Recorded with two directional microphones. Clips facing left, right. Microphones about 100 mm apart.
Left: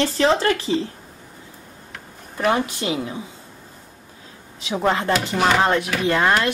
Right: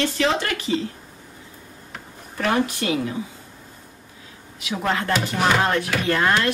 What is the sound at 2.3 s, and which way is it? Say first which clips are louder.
Speech: left 1 dB; 20° left (ahead or behind).